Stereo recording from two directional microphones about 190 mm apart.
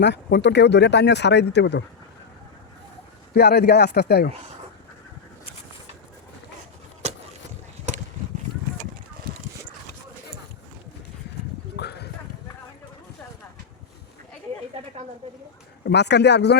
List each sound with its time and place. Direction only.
0.0 s speech: 65° left (ahead or behind)
3.3 s speech: 60° left (ahead or behind)
7.0 s vehicle: 35° right (ahead or behind)
11.8 s a sound: 60° left (ahead or behind)
15.8 s speech: 65° left (ahead or behind)